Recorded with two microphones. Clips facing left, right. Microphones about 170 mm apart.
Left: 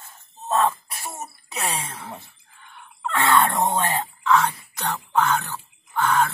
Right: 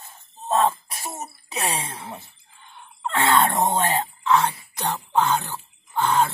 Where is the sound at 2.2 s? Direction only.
20° right (ahead or behind).